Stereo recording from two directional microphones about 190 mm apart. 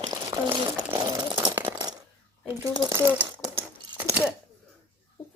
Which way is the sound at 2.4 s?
15° right (ahead or behind).